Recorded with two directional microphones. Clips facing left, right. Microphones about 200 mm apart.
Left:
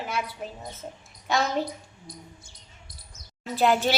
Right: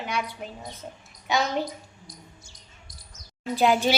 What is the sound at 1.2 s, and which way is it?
Speech, centre (ahead or behind).